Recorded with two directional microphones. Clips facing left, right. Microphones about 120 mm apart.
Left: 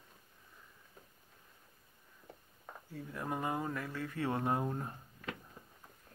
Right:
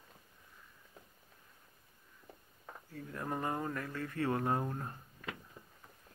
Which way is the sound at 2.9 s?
10° left (ahead or behind).